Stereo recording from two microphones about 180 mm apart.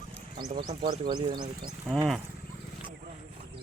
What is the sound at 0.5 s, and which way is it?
Speech, 30° right (ahead or behind).